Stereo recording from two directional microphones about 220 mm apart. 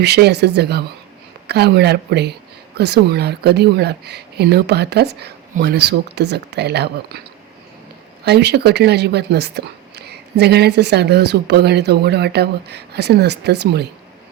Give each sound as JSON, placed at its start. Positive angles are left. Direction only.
{"t": 0.0, "sound": "speech", "side_deg": -50}
{"t": 8.2, "sound": "speech", "side_deg": -50}